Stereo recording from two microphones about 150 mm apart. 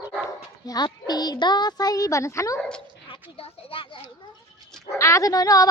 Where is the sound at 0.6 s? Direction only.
25° left (ahead or behind).